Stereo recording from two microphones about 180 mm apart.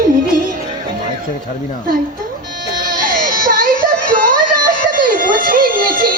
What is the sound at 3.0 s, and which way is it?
Music, 55° right (ahead or behind).